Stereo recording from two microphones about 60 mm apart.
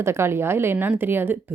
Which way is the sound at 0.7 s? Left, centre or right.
Right.